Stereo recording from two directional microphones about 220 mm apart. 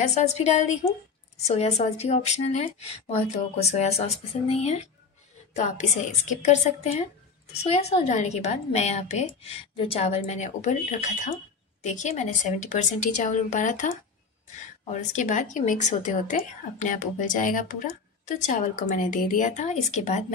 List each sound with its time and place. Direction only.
0.0 s a woman's voice: 30° left (ahead or behind)